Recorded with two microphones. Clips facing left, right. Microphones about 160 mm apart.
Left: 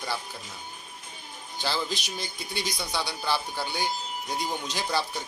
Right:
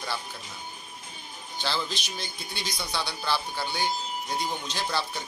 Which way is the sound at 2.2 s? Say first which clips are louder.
Left 3 dB; centre (ahead or behind).